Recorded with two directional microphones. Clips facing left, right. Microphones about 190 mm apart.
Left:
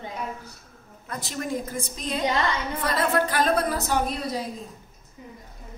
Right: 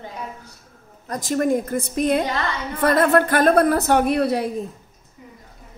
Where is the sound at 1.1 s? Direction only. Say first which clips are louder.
Right 10 dB; 45° right (ahead or behind); by 4.6 s 65° right (ahead or behind).